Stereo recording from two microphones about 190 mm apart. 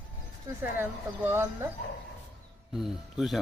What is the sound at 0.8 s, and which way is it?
Speech, 10° right (ahead or behind).